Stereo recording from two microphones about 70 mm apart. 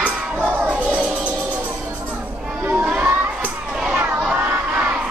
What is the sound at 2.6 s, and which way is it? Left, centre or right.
Crowd, right.